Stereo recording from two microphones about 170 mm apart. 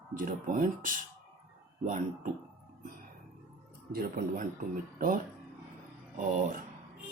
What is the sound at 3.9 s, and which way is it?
Speech, 60° right (ahead or behind).